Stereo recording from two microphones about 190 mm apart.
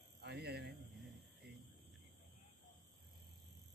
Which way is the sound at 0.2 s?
60° right (ahead or behind).